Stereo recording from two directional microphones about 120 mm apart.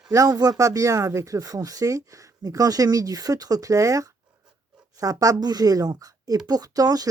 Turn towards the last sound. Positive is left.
turn(degrees=-30)  # may be behind; listen again after turning